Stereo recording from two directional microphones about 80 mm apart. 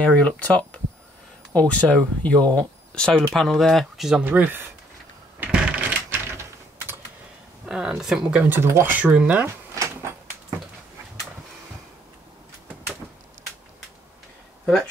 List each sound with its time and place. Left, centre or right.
0.0 s speech: centre
4.2 s speech: right
5.4 s typing: centre
7.6 s speech: centre
8.4 s speech: right
9.8 s sliding door: right